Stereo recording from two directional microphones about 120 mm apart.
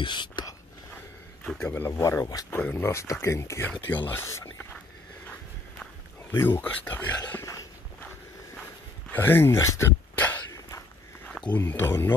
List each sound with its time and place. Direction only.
0.0 s a sound: 40° left (ahead or behind)
1.4 s speech: 5° left (ahead or behind)
1.7 s speech: 20° left (ahead or behind)
6.3 s speech: 20° left (ahead or behind)
9.1 s speech: 20° left (ahead or behind)